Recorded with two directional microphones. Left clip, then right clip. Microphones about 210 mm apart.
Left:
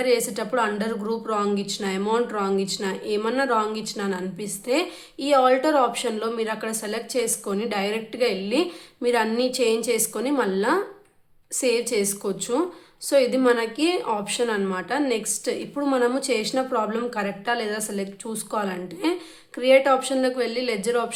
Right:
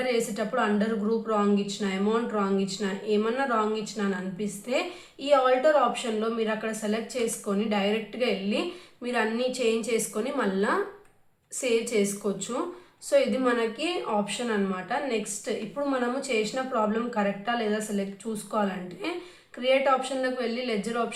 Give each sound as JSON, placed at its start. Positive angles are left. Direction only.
{"t": 0.1, "sound": "a woman's voice", "side_deg": 45}